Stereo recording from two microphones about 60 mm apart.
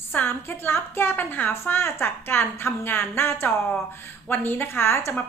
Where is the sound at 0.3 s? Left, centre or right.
Left.